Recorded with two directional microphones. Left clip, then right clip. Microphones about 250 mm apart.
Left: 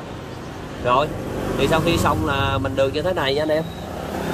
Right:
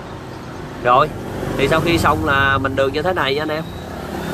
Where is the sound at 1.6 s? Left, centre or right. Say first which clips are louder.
Right 4 dB; centre.